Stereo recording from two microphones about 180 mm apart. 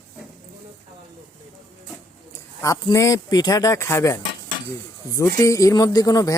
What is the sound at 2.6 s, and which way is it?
Speech, 20° left (ahead or behind).